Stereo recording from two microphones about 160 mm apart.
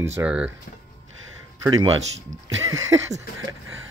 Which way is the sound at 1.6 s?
25° right (ahead or behind).